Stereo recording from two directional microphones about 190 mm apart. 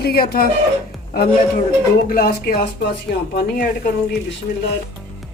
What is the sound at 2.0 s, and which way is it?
Speech, 50° left (ahead or behind).